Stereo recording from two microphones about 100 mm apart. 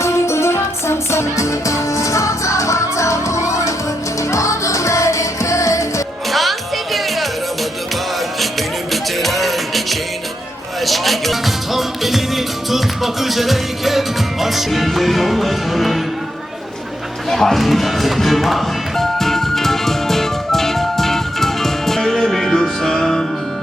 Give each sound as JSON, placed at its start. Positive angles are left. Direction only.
{"t": 0.0, "sound": "music", "side_deg": 25}
{"t": 6.3, "sound": "music", "side_deg": 0}
{"t": 8.9, "sound": "music", "side_deg": 0}
{"t": 17.2, "sound": "music", "side_deg": 0}